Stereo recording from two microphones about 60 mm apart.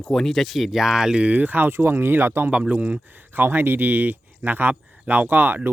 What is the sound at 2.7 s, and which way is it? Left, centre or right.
Speech, right.